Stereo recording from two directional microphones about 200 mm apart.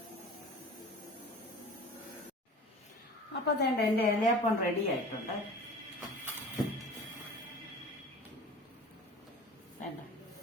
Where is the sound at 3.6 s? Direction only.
50° left (ahead or behind).